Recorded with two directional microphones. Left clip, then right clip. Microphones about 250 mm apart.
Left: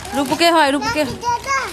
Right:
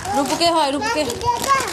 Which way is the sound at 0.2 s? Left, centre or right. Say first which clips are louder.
Left 4 dB; left.